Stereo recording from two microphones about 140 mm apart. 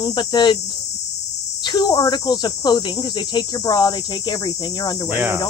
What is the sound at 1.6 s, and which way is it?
Speech, 35° left (ahead or behind).